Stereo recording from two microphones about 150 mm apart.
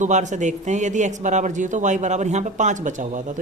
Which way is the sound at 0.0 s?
55° right (ahead or behind).